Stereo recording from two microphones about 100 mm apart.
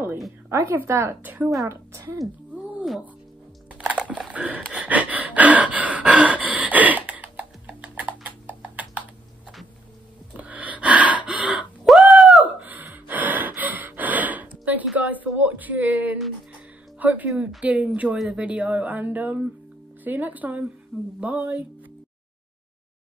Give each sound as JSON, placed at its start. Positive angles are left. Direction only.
{"t": 0.5, "sound": "a woman's voice", "side_deg": -30}
{"t": 4.3, "sound": "gasp", "side_deg": -10}
{"t": 10.3, "sound": "gasp", "side_deg": -15}
{"t": 11.8, "sound": "a sound", "side_deg": 0}
{"t": 12.5, "sound": "gasp", "side_deg": -15}
{"t": 15.0, "sound": "a sound", "side_deg": -15}
{"t": 17.0, "sound": "music", "side_deg": -15}
{"t": 17.3, "sound": "speech", "side_deg": -5}